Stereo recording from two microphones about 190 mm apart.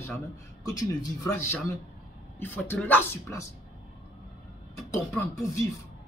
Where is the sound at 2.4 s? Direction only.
10° left (ahead or behind).